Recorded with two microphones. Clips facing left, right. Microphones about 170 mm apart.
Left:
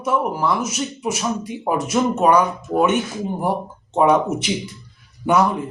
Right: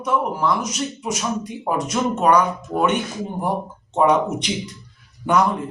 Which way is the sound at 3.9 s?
5° left (ahead or behind).